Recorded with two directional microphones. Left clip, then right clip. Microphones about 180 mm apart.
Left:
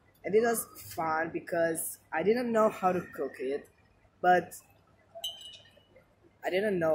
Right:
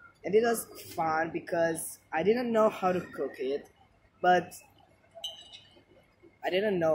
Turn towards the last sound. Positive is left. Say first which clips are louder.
# right 1 dB
turn(degrees=-5)  # may be behind; listen again after turning